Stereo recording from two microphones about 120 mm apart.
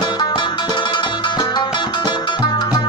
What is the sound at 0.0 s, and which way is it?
Music, 35° left (ahead or behind).